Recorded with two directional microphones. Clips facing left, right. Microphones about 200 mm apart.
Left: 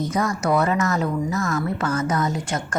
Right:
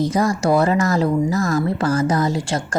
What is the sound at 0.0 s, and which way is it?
Speech, 30° right (ahead or behind).